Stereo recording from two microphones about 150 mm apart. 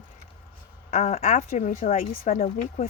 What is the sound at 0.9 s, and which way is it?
Speech, 45° left (ahead or behind).